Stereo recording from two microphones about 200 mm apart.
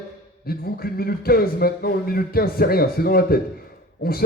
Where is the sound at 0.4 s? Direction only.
50° left (ahead or behind).